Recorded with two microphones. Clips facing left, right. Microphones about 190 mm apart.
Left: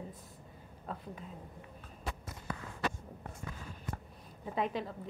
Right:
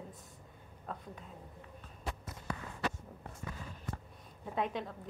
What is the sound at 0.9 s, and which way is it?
Speech, 5° left (ahead or behind).